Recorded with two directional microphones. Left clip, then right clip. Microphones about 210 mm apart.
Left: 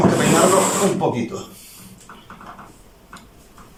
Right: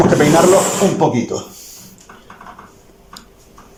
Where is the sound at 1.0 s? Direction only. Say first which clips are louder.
Right 5 dB; 30° right (ahead or behind).